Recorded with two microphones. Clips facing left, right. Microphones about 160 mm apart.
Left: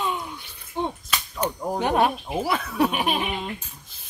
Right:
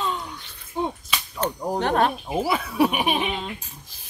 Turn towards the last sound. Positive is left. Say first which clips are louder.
# right 2 dB
turn(degrees=-10)  # may be behind; listen again after turning